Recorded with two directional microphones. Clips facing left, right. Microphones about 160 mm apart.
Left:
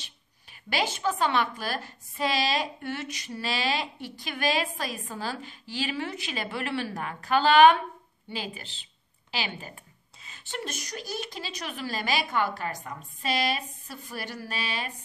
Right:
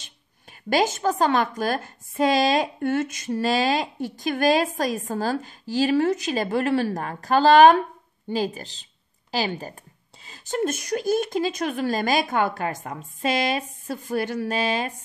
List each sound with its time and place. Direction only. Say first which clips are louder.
0.0 s a woman's voice: right 3 dB; 45° right (ahead or behind)